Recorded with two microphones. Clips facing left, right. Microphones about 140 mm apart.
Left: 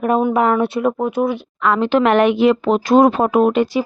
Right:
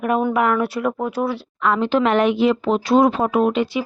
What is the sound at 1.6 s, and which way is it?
Speech, 80° left.